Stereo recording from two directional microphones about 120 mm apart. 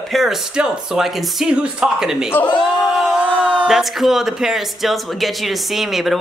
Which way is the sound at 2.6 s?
5° right (ahead or behind).